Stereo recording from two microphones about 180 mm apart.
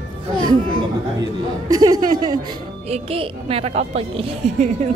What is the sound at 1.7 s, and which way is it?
A woman's voice, 20° right (ahead or behind).